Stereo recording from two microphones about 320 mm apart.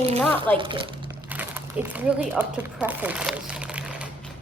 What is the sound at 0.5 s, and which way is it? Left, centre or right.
Speech, centre.